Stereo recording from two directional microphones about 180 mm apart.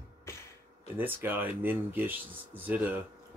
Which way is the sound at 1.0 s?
10° right (ahead or behind).